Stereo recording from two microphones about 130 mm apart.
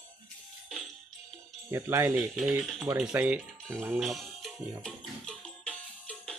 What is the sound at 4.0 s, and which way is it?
Music, centre (ahead or behind).